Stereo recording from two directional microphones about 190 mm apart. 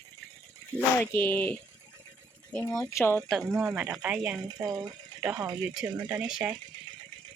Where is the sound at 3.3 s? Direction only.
Centre (ahead or behind).